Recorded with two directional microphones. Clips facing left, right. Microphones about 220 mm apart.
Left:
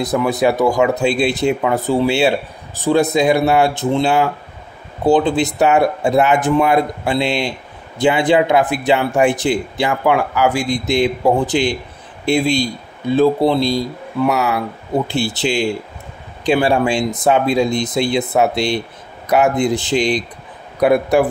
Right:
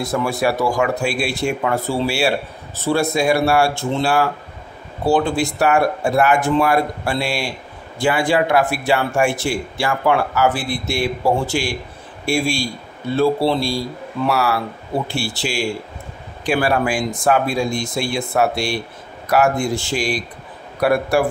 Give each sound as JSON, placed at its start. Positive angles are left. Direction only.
{"t": 0.0, "sound": "speech", "side_deg": 20}